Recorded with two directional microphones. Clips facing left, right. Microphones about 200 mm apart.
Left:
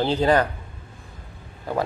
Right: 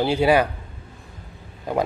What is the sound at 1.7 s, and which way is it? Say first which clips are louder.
Speech: right 2 dB; 15° right (ahead or behind).